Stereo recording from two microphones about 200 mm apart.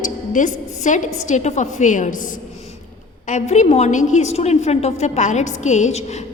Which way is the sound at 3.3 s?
35° left (ahead or behind).